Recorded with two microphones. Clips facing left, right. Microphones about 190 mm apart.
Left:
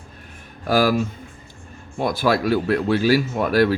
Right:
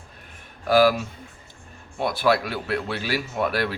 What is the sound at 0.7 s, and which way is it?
Speech, 45° left (ahead or behind).